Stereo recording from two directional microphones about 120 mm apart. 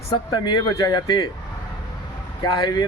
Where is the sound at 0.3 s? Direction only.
35° left (ahead or behind).